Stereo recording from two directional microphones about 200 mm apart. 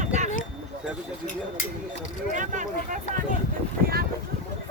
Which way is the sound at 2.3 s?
40° right (ahead or behind).